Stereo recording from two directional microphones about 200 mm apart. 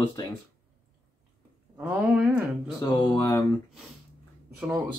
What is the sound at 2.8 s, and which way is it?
Speech, 15° left (ahead or behind).